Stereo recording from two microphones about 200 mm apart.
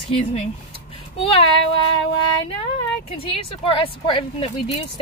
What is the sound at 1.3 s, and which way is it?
A woman's voice, 25° left (ahead or behind).